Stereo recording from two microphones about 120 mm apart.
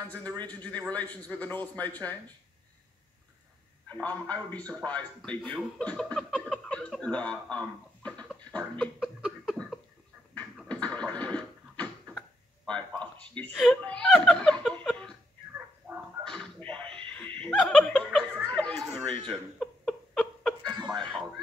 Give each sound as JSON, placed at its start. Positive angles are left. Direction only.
{"t": 0.5, "sound": "speech", "side_deg": 10}
{"t": 3.9, "sound": "speech", "side_deg": 15}
{"t": 8.3, "sound": "a sound", "side_deg": 10}
{"t": 10.3, "sound": "scratching", "side_deg": 10}
{"t": 13.6, "sound": "speech", "side_deg": 5}
{"t": 15.8, "sound": "a sound", "side_deg": -15}
{"t": 16.3, "sound": "music", "side_deg": 5}
{"t": 17.1, "sound": "laughter", "side_deg": 10}
{"t": 18.4, "sound": "chatter", "side_deg": 10}
{"t": 19.2, "sound": "a sound", "side_deg": 5}
{"t": 20.6, "sound": "chuckle", "side_deg": -40}